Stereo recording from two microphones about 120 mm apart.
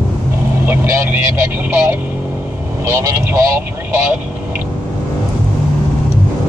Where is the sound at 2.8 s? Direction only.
25° right (ahead or behind).